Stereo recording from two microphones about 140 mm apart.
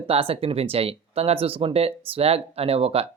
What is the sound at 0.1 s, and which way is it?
Speech, 40° right (ahead or behind).